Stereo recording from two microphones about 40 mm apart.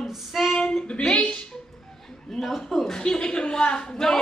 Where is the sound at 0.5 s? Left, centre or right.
Centre.